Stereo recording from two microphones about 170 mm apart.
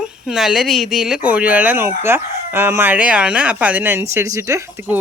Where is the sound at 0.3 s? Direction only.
Centre (ahead or behind).